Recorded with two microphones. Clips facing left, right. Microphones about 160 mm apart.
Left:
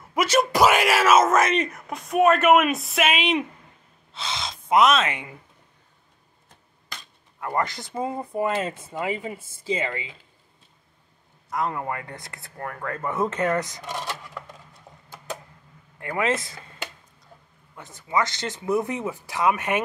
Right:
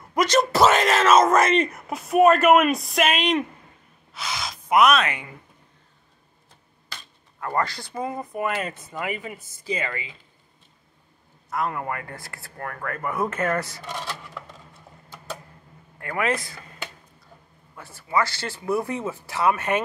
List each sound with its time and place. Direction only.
0.1 s speech: 5° left (ahead or behind)
4.1 s speech: 25° left (ahead or behind)
7.3 s speech: 20° left (ahead or behind)
11.5 s speech: 20° left (ahead or behind)
16.0 s speech: 20° left (ahead or behind)
17.7 s speech: 20° left (ahead or behind)